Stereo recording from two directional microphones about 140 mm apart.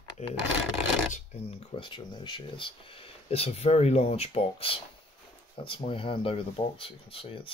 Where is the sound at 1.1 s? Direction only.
45° left (ahead or behind).